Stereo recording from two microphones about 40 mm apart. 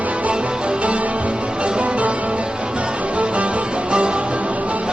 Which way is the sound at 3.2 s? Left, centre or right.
Right.